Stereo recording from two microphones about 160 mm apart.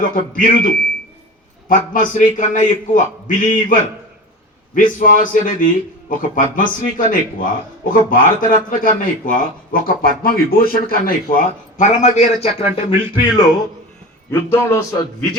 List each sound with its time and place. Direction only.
0.3 s a man's voice: 60° left (ahead or behind); by 13.4 s 35° left (ahead or behind)
14.3 s a man's voice: 15° left (ahead or behind)